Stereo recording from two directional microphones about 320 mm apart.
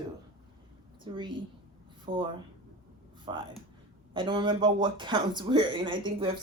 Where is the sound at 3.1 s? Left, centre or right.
Centre.